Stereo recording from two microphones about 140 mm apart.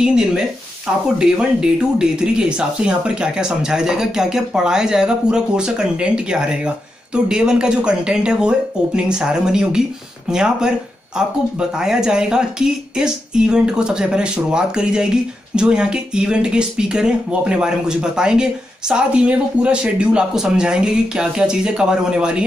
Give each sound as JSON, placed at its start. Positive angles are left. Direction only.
{"t": 0.0, "sound": "speech", "side_deg": -5}
{"t": 11.8, "sound": "speech", "side_deg": -5}